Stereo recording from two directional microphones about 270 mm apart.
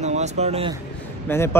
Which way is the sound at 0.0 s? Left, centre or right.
Right.